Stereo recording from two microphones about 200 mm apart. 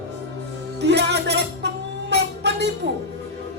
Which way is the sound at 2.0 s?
55° right (ahead or behind).